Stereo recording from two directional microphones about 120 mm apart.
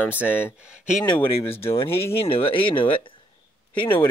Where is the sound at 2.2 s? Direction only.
50° left (ahead or behind).